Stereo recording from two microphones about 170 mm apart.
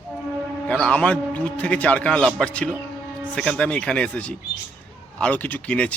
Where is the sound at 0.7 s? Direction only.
5° left (ahead or behind).